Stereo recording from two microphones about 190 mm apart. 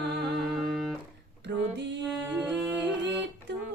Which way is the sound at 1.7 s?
65° right (ahead or behind).